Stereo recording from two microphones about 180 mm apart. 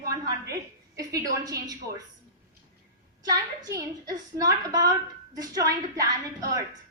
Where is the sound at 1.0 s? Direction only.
20° right (ahead or behind).